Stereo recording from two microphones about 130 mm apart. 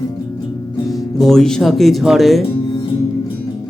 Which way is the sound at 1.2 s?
5° left (ahead or behind).